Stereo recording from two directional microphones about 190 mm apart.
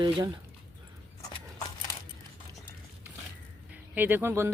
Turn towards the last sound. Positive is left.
turn(degrees=-15)  # may be behind; listen again after turning